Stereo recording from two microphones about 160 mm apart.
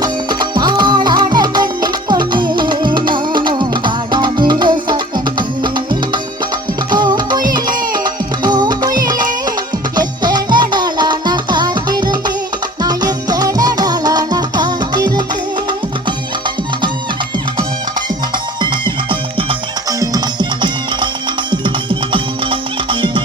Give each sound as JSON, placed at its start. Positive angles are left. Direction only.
{"t": 0.0, "sound": "music", "side_deg": -25}
{"t": 19.9, "sound": "music", "side_deg": -25}